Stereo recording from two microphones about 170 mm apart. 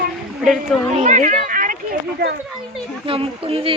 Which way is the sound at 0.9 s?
45° right (ahead or behind).